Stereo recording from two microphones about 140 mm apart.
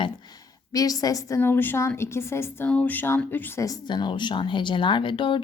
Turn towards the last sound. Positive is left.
turn(degrees=35)  # may be behind; listen again after turning